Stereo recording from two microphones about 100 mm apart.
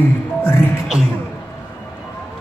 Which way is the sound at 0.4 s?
20° left (ahead or behind).